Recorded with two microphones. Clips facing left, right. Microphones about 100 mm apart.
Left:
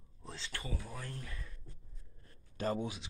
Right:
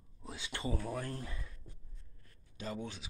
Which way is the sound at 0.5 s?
20° right (ahead or behind).